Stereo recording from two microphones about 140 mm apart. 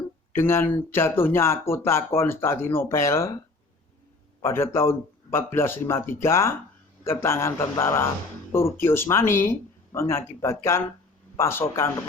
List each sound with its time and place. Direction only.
0.3 s speech: 15° left (ahead or behind)
4.4 s speech: 20° left (ahead or behind)